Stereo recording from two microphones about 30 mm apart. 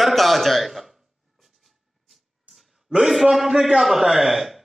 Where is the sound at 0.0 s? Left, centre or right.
Centre.